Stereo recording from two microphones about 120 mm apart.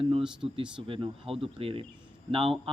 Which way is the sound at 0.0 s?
50° right (ahead or behind).